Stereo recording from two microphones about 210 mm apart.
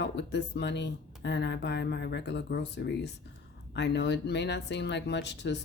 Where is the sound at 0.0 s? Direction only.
55° left (ahead or behind).